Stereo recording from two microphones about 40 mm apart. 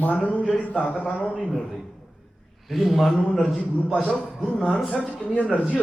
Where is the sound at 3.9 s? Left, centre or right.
Left.